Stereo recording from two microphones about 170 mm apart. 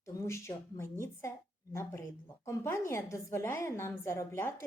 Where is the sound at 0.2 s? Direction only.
15° left (ahead or behind).